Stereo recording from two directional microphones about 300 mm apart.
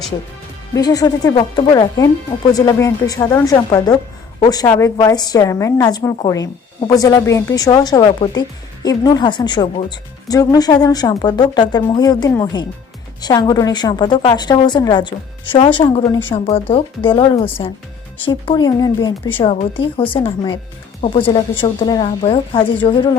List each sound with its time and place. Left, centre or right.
0.7 s a woman's voice: centre